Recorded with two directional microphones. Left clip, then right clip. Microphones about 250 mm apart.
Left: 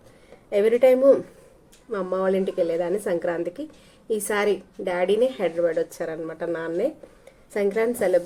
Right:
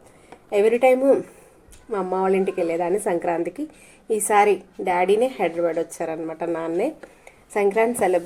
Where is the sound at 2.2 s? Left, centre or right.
Right.